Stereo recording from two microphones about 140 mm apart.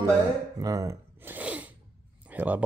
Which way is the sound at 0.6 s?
25° right (ahead or behind).